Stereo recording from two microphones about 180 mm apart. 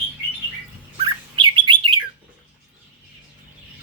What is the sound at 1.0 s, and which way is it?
Bird, 25° right (ahead or behind).